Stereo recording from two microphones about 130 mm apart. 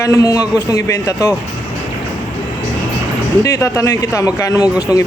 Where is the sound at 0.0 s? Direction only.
25° left (ahead or behind).